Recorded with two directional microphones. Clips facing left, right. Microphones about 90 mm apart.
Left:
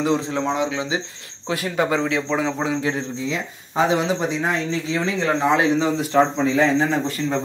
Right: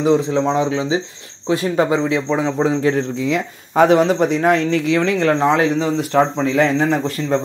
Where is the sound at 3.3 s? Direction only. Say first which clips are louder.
Right 6 dB; 60° right (ahead or behind).